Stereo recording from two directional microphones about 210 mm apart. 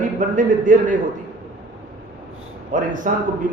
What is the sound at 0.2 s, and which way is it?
Speech, 40° right (ahead or behind).